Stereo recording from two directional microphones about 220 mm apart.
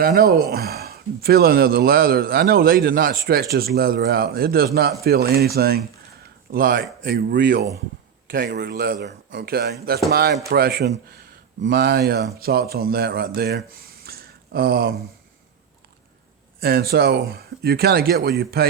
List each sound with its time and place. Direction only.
0.0 s speech: 45° right (ahead or behind)
16.6 s speech: 45° right (ahead or behind)